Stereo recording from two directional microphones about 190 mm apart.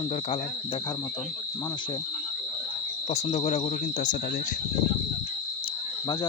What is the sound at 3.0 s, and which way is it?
Speech, 35° left (ahead or behind).